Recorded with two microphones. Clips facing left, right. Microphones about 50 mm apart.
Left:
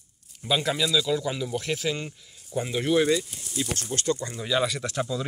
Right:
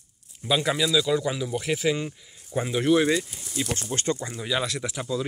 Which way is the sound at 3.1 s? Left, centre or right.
Centre.